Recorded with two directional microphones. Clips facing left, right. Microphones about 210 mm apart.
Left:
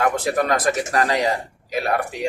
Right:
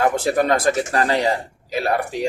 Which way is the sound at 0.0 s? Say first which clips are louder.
Right 2 dB; 30° right (ahead or behind).